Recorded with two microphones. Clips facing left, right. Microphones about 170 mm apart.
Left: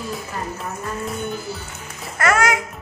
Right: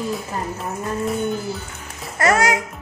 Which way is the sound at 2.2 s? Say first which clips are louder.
Right 1 dB; 35° right (ahead or behind).